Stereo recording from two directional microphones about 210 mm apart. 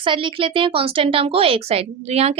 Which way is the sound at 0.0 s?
25° right (ahead or behind).